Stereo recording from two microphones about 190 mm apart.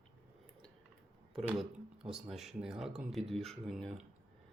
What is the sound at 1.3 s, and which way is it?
Speech, centre (ahead or behind).